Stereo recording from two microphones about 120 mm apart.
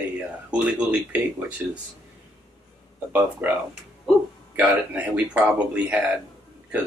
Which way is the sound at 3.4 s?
15° right (ahead or behind).